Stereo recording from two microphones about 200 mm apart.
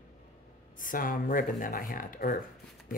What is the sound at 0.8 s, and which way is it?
Speech, 45° left (ahead or behind).